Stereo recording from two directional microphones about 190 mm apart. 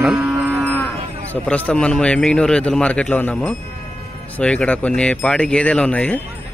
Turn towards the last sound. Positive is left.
turn(degrees=5)  # may be behind; listen again after turning